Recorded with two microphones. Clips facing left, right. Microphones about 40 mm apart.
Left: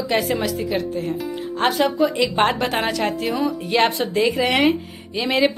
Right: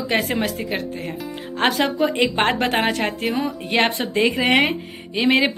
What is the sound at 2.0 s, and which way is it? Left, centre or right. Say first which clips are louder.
Speech: even; right.